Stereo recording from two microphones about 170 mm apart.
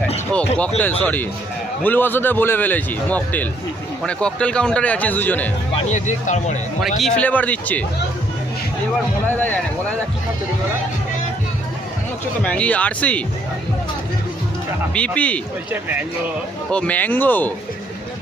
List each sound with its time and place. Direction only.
1.0 s a man's voice: 10° left (ahead or behind)
5.7 s speech: 45° left (ahead or behind)
6.8 s a man's voice: 5° left (ahead or behind)
9.3 s a man's voice: 10° left (ahead or behind)
12.4 s a man's voice: 5° left (ahead or behind)
14.9 s a man's voice: 5° left (ahead or behind)
15.7 s speech: 10° right (ahead or behind)
16.7 s a man's voice: 10° left (ahead or behind)